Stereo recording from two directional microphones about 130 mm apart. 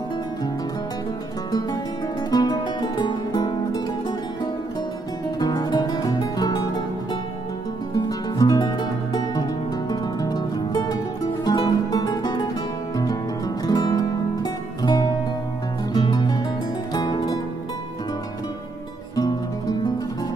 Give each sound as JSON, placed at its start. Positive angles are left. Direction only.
{"t": 2.3, "sound": "music", "side_deg": 30}
{"t": 5.4, "sound": "music", "side_deg": 35}
{"t": 7.9, "sound": "music", "side_deg": 30}